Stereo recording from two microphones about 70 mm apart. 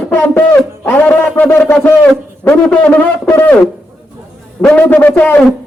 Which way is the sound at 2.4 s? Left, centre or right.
Centre.